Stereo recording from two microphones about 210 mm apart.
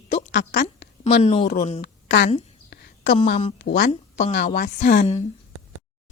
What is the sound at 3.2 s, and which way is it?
A woman's voice, 35° left (ahead or behind).